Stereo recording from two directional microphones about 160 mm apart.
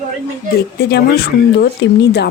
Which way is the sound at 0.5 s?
90° left.